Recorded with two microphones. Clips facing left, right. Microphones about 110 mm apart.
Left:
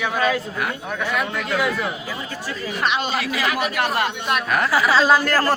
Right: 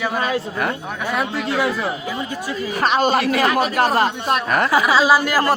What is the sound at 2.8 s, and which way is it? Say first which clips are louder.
Speech: right 6 dB; 40° right (ahead or behind).